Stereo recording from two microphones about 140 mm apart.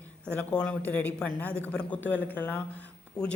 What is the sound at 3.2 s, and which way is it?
Speech, 25° left (ahead or behind).